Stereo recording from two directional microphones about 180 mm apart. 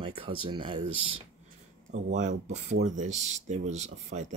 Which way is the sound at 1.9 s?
40° right (ahead or behind).